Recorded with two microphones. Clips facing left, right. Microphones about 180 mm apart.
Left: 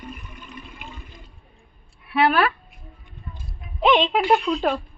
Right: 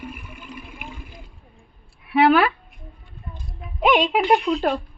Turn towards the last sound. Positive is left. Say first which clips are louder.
# right 1 dB
turn(degrees=-10)  # may be behind; listen again after turning